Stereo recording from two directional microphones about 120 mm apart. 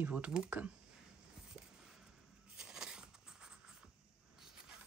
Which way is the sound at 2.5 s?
5° right (ahead or behind).